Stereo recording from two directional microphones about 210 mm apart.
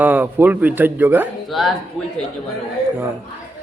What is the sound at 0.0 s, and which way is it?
Speech, 10° right (ahead or behind).